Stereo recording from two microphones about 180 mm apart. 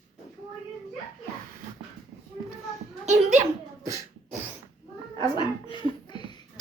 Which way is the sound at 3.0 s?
40° right (ahead or behind).